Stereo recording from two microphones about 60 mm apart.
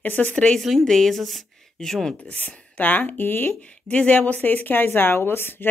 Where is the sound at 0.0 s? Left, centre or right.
Left.